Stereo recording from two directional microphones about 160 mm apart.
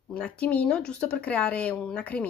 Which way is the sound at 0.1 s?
10° left (ahead or behind).